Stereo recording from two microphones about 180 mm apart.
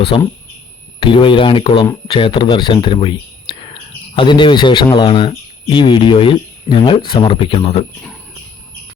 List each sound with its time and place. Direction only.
0.1 s speech: 30° left (ahead or behind)